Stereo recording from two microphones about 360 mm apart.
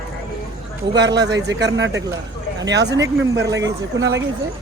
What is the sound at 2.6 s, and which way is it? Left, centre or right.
Speech, right.